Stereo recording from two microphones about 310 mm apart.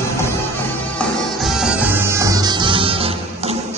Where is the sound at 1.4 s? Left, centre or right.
Centre.